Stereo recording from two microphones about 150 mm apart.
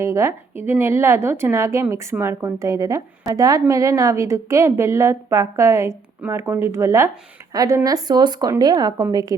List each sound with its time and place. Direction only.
0.0 s speech: 20° right (ahead or behind)